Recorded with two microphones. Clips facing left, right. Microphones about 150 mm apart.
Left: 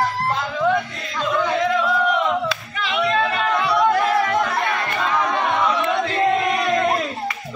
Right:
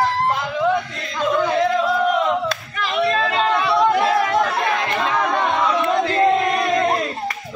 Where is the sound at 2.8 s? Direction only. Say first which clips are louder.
Right 1 dB; 40° right (ahead or behind).